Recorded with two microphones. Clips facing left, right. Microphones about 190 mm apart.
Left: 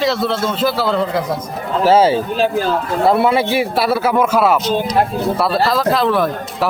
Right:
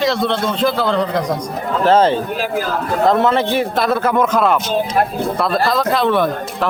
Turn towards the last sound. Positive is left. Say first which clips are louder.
# even
turn(degrees=0)  # may be behind; listen again after turning